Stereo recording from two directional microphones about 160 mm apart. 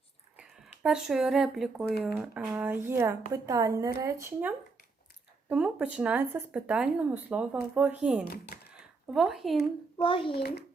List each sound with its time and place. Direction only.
0.3 s speech: 5° right (ahead or behind)
10.0 s a child's voice: 35° left (ahead or behind)